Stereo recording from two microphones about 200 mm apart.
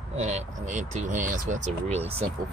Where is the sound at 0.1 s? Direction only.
35° right (ahead or behind).